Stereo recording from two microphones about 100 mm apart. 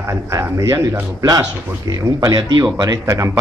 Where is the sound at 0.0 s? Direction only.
30° right (ahead or behind).